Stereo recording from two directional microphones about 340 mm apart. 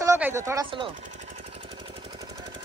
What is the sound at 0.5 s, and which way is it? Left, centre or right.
Speech, centre.